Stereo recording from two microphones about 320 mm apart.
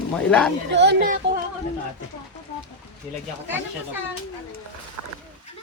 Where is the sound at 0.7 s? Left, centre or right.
Right.